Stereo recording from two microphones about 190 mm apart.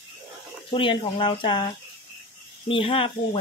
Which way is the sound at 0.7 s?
25° left (ahead or behind).